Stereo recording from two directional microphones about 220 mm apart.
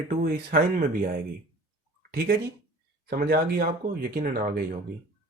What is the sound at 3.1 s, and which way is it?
Speech, 40° right (ahead or behind).